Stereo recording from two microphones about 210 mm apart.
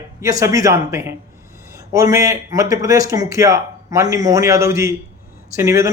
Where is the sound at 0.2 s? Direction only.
15° right (ahead or behind).